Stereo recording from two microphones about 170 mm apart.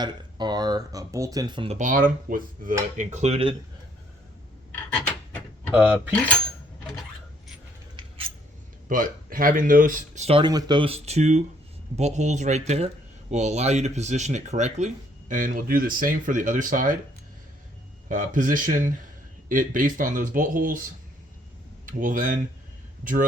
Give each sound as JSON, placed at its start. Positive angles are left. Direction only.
{"t": 0.0, "sound": "speech", "side_deg": -25}
{"t": 1.8, "sound": "speech", "side_deg": -55}
{"t": 3.0, "sound": "speech", "side_deg": -45}
{"t": 5.7, "sound": "cutlery", "side_deg": -10}
{"t": 8.0, "sound": "scissors", "side_deg": -25}
{"t": 8.9, "sound": "speech", "side_deg": -55}
{"t": 10.2, "sound": "speech", "side_deg": -35}
{"t": 18.1, "sound": "speech", "side_deg": -50}
{"t": 21.8, "sound": "speech", "side_deg": -55}